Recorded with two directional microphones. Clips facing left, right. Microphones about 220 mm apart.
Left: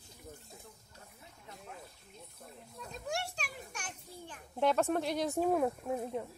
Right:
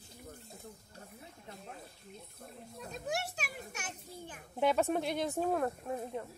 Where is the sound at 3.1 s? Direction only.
5° right (ahead or behind).